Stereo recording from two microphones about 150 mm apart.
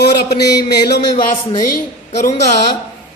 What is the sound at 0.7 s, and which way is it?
Music, 90° left.